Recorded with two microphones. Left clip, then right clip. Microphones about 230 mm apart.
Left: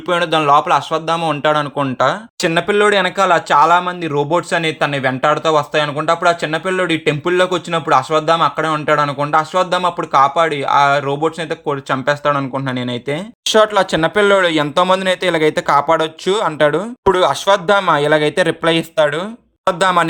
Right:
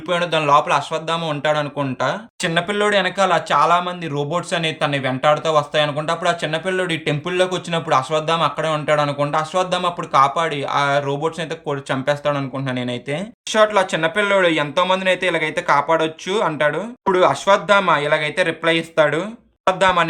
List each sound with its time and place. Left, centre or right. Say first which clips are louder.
0.1 s speech: left 3 dB; centre